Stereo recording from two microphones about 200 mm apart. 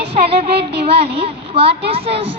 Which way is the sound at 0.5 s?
55° right (ahead or behind).